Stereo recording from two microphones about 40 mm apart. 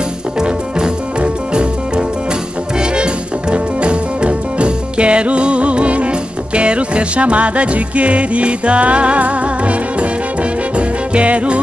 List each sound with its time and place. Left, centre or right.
0.4 s music: centre